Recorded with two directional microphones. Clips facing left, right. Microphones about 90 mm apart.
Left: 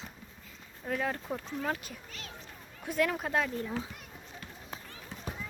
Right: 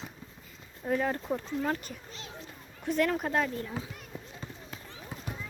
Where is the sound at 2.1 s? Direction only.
25° right (ahead or behind).